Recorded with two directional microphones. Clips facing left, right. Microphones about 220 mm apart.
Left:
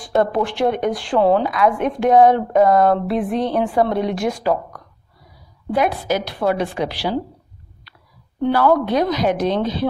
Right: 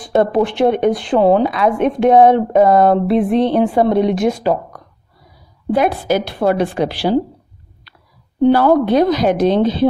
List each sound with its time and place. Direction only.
0.0 s a woman's voice: 20° right (ahead or behind)
6.4 s speech: 50° right (ahead or behind)
8.4 s a woman's voice: 30° right (ahead or behind)